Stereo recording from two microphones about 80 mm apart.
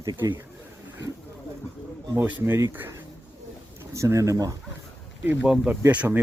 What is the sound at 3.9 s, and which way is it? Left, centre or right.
Speech, right.